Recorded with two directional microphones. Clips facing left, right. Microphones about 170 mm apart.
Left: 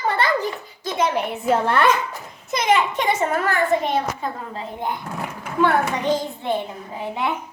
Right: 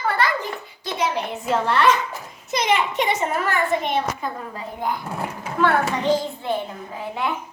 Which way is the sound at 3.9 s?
30° left (ahead or behind).